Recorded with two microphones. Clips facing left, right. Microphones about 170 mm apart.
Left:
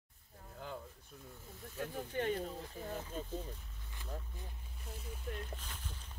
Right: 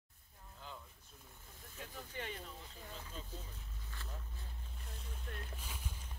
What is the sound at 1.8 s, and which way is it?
Speech, 45° left (ahead or behind).